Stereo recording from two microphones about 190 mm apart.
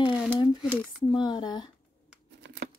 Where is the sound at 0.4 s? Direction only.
25° left (ahead or behind).